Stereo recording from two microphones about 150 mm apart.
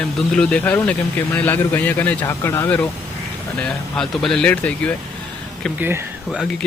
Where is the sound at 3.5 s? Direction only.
5° left (ahead or behind).